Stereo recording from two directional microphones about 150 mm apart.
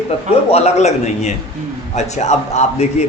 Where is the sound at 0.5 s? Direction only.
45° left (ahead or behind).